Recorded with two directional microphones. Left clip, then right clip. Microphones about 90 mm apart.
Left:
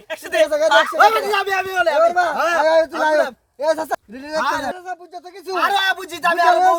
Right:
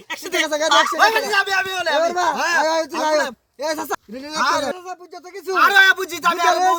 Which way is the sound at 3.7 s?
50° right (ahead or behind).